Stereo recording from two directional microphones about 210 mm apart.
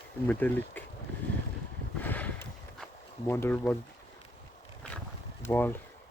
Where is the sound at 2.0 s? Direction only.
10° left (ahead or behind).